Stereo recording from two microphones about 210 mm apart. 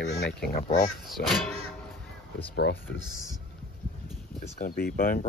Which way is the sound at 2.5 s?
55° left (ahead or behind).